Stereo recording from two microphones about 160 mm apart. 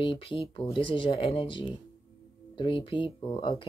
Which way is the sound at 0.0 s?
35° left (ahead or behind).